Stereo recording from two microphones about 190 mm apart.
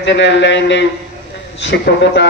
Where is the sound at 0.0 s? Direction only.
65° left (ahead or behind).